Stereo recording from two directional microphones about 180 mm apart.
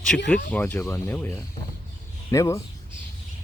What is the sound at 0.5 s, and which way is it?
Speech, 10° left (ahead or behind).